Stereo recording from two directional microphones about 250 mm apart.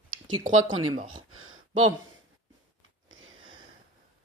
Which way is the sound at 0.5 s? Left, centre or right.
Right.